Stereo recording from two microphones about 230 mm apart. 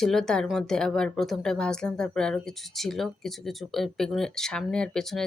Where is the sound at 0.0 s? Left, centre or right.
Centre.